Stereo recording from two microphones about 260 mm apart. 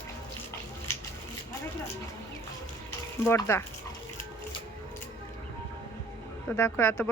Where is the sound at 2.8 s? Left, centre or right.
Centre.